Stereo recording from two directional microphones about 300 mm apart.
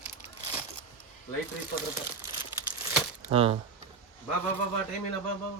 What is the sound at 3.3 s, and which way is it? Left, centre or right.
Speech, centre.